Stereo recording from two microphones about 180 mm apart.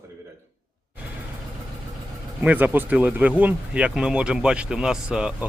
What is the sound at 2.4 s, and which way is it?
Speech, 10° right (ahead or behind).